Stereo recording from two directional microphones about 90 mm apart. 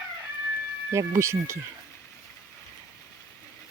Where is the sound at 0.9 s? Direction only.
35° right (ahead or behind).